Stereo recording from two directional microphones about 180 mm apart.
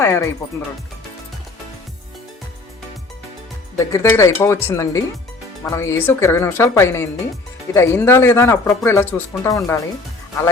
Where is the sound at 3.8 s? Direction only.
15° left (ahead or behind).